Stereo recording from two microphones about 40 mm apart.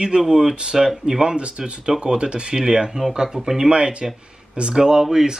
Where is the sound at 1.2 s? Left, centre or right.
Right.